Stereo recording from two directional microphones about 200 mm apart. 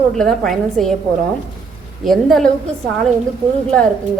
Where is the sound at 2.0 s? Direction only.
Centre (ahead or behind).